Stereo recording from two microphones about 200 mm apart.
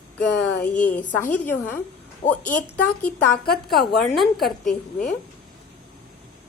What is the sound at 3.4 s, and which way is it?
Speech, 50° left (ahead or behind).